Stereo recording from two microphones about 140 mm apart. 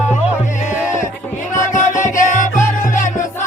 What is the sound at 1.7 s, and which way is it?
Music, 65° left (ahead or behind).